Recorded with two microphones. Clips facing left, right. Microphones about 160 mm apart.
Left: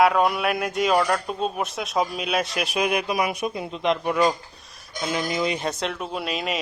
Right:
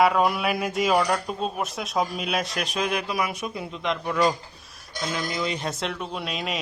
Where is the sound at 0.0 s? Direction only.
Centre (ahead or behind); by 5.5 s 15° left (ahead or behind).